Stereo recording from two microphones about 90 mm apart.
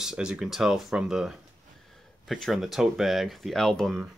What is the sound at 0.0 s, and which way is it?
Speech, 10° right (ahead or behind).